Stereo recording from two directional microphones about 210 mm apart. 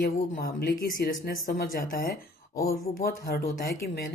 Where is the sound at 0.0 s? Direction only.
45° left (ahead or behind).